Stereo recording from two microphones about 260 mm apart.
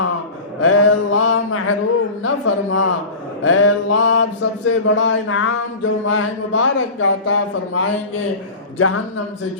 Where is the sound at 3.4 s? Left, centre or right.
Left.